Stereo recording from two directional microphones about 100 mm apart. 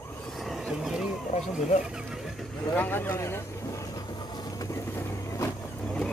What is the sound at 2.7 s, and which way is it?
Speech, 20° left (ahead or behind).